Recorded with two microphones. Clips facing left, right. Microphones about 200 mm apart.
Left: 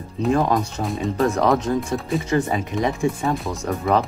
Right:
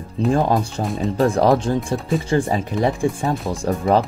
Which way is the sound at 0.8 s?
30° right (ahead or behind).